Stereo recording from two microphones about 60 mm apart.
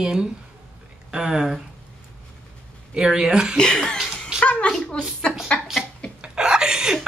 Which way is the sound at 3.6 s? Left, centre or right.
Centre.